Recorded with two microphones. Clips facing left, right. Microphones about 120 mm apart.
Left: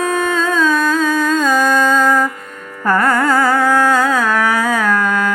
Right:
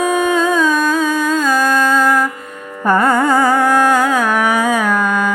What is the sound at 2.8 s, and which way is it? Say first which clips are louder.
Music: right 1 dB; 20° right (ahead or behind).